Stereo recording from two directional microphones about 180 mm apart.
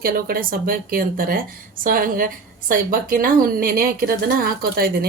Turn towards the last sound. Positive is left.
turn(degrees=-55)  # may be behind; listen again after turning